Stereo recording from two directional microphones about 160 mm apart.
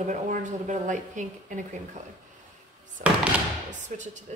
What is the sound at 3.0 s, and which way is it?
Speech, 55° right (ahead or behind).